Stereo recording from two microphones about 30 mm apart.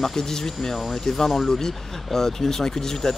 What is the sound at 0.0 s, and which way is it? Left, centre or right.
Speech, centre.